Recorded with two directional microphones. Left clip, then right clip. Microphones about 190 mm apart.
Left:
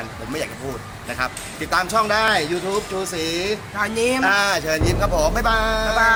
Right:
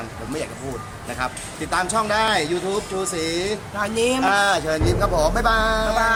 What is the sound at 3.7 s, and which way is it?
Music, 15° right (ahead or behind).